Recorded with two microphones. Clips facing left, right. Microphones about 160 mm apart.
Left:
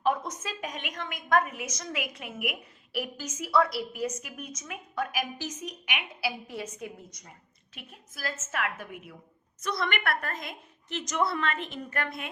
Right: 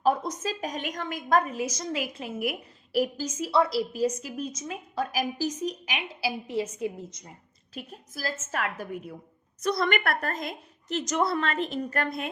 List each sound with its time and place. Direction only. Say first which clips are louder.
0.0 s a woman's voice: right 3 dB; 35° right (ahead or behind)
7.7 s a woman's voice: right 9 dB; 35° right (ahead or behind)